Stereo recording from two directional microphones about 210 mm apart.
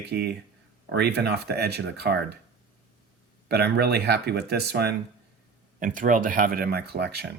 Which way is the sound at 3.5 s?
50° right (ahead or behind).